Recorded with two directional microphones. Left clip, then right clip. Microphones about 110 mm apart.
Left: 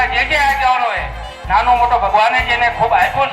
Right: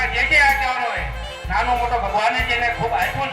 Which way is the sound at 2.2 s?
20° left (ahead or behind).